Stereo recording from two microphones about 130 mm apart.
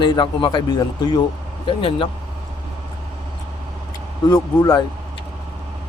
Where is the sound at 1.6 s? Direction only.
40° left (ahead or behind).